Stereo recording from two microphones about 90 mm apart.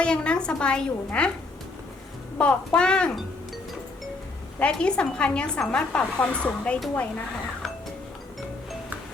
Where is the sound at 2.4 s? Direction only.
10° left (ahead or behind).